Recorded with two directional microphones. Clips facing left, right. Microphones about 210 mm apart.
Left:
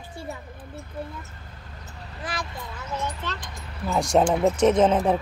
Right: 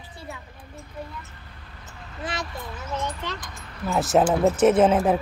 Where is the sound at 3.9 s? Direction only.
5° right (ahead or behind).